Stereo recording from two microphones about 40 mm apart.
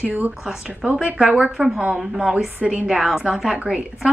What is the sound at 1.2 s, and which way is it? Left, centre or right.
A woman's voice, centre.